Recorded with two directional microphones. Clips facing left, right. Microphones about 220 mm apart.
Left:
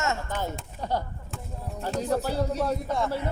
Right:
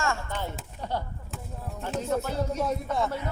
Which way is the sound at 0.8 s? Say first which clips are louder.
Left 3 dB; 40° left (ahead or behind).